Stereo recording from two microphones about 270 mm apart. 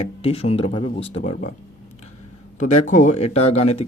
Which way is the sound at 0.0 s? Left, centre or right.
Left.